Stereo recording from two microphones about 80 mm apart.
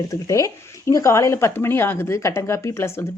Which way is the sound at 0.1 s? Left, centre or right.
Left.